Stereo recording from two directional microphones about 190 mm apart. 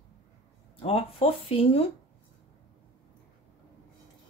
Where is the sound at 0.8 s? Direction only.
30° left (ahead or behind).